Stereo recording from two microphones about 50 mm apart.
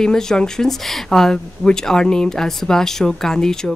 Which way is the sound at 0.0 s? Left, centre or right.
Centre.